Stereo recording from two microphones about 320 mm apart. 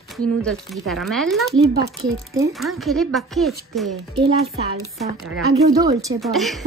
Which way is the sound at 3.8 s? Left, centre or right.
Right.